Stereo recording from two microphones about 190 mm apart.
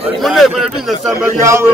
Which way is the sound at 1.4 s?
15° right (ahead or behind).